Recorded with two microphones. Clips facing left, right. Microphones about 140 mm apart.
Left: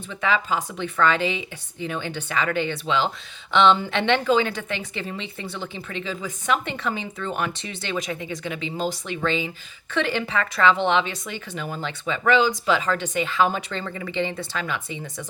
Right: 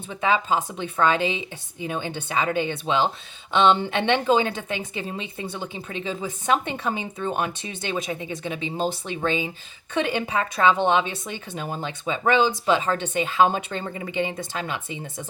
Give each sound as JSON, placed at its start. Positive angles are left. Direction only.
{"t": 0.1, "sound": "a woman's voice", "side_deg": -20}
{"t": 14.1, "sound": "a woman's voice", "side_deg": -15}